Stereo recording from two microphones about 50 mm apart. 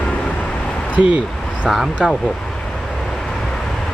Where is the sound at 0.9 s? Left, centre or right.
Right.